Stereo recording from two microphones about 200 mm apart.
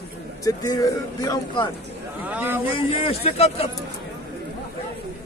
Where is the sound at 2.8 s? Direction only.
30° left (ahead or behind).